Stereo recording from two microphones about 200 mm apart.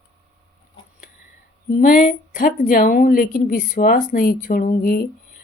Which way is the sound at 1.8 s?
40° left (ahead or behind).